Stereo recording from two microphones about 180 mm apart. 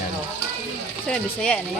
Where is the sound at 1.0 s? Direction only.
5° left (ahead or behind).